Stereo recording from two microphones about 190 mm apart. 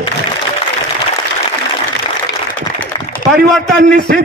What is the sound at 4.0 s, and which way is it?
Speech, 60° right (ahead or behind).